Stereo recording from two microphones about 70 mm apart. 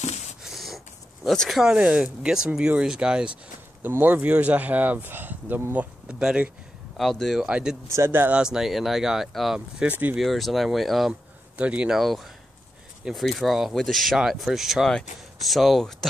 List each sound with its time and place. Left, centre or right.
0.4 s a sound: centre
1.5 s speech: centre
3.8 s speech: right
6.0 s speech: centre
7.0 s speech: centre
7.4 s speech: centre
7.9 s speech: right
8.3 s speech: centre
9.8 s speech: right
10.1 s speech: centre
11.5 s speech: centre
12.0 s speech: centre